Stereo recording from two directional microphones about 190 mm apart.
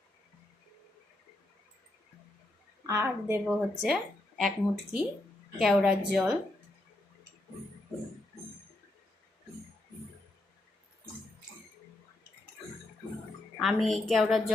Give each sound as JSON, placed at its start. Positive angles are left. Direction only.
{"t": 2.8, "sound": "a woman's voice", "side_deg": -15}
{"t": 3.4, "sound": "speech", "side_deg": 0}
{"t": 13.6, "sound": "speech", "side_deg": 0}